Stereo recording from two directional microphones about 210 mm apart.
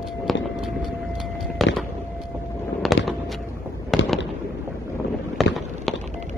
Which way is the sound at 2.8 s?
Centre (ahead or behind).